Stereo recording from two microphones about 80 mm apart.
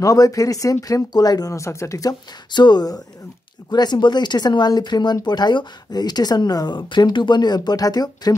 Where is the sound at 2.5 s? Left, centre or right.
Left.